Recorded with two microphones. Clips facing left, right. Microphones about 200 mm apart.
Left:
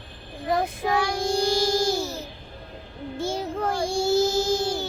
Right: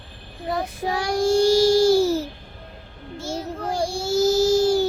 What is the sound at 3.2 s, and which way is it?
Child singing, 55° left (ahead or behind).